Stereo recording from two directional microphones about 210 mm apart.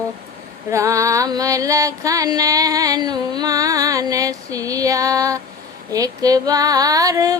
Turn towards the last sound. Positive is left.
turn(degrees=-15)  # may be behind; listen again after turning